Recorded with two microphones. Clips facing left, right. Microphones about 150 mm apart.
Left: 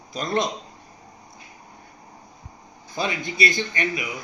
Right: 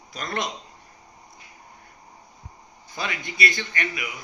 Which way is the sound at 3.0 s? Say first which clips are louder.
Left 4 dB; 30° left (ahead or behind).